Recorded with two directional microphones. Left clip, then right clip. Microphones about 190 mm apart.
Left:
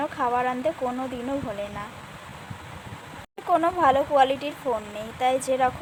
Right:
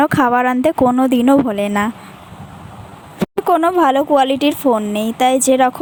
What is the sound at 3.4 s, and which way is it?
Speech, 55° right (ahead or behind).